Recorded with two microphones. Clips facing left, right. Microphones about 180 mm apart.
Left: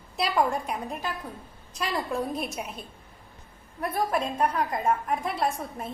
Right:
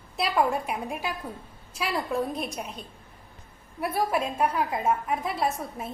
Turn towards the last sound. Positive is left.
turn(degrees=0)  # may be behind; listen again after turning